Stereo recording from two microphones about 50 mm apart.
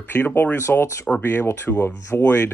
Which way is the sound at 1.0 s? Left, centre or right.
Left.